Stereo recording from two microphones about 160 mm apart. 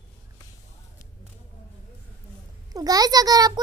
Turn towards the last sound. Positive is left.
turn(degrees=-25)  # may be behind; listen again after turning